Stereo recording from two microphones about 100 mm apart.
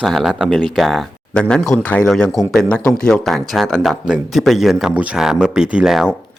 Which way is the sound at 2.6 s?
15° left (ahead or behind).